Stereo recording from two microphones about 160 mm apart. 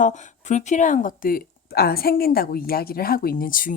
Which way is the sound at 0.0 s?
50° left (ahead or behind).